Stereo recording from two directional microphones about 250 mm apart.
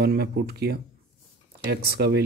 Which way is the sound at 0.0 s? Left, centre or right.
Right.